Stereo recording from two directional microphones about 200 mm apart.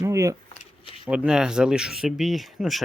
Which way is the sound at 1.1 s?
5° right (ahead or behind).